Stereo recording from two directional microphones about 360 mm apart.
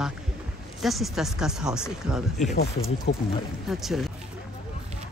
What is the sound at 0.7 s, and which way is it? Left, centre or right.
Speech, centre.